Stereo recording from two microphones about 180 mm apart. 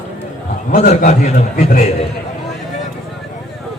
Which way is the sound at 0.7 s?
50° left (ahead or behind).